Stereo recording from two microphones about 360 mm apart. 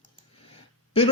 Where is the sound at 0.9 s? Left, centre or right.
Centre.